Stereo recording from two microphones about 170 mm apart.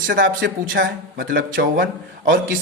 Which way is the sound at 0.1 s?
90° right.